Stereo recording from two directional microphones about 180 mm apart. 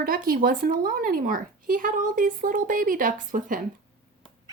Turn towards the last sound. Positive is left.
turn(degrees=-45)  # may be behind; listen again after turning